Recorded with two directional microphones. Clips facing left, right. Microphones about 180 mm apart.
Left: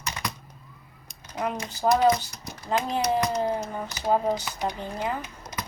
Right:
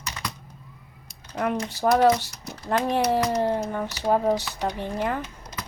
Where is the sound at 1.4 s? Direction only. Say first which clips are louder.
Right 3 dB; 60° right (ahead or behind).